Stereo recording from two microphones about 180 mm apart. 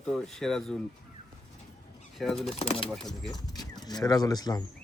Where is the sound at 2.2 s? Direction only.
Centre (ahead or behind).